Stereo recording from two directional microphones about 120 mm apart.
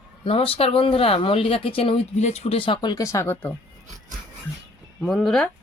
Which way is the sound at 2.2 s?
60° left (ahead or behind).